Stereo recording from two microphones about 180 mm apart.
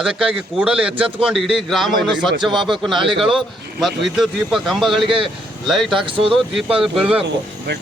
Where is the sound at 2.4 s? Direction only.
25° right (ahead or behind).